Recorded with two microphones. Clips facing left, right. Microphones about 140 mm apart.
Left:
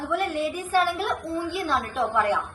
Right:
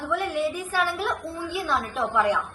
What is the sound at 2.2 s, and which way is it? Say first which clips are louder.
Speech: right 2 dB; 10° right (ahead or behind).